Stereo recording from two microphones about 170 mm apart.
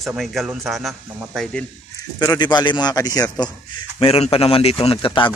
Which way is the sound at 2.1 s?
20° left (ahead or behind).